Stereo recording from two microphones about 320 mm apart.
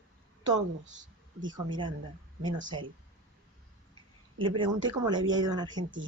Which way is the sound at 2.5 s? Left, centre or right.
Centre.